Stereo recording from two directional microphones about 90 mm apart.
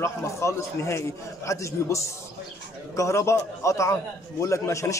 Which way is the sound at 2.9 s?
35° left (ahead or behind).